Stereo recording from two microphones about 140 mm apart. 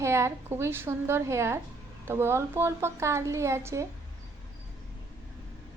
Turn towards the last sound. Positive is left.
turn(degrees=-20)  # may be behind; listen again after turning